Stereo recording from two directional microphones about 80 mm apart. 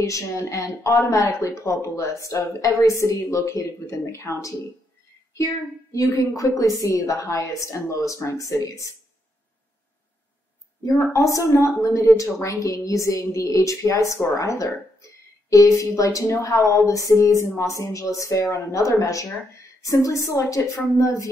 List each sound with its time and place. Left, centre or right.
0.0 s speech: left
11.1 s a woman's voice: left